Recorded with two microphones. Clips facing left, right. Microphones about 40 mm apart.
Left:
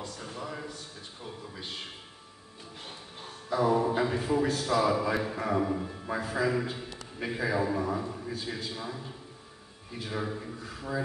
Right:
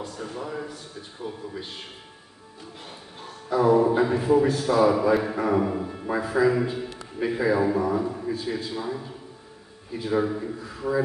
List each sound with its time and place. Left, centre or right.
0.4 s a sound: centre
3.4 s music: right
4.0 s a man's voice: centre
10.1 s a man's voice: right